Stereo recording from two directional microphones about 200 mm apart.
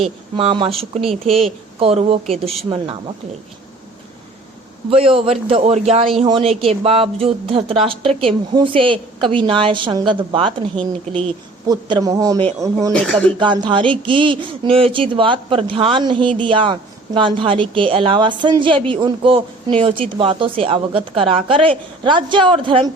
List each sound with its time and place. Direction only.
0.0 s a woman's voice: 30° right (ahead or behind)
4.9 s a woman's voice: 30° right (ahead or behind)
12.9 s speech: 5° left (ahead or behind)
13.4 s a woman's voice: 25° right (ahead or behind)